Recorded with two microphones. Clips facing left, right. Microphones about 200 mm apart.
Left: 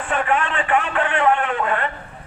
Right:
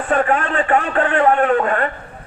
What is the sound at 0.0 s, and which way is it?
A man's voice, 40° right (ahead or behind).